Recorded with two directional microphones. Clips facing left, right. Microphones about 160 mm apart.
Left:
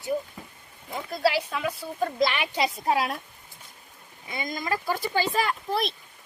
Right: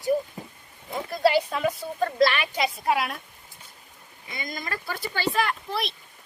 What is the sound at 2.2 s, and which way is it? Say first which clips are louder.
Speech: right 4 dB; 20° left (ahead or behind).